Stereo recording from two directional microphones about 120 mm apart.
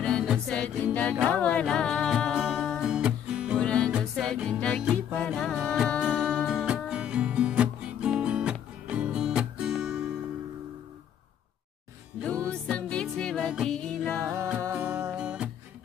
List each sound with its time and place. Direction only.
0.0 s music: centre (ahead or behind)
3.5 s music: 10° left (ahead or behind)
12.2 s music: 10° left (ahead or behind)
14.2 s music: 25° right (ahead or behind)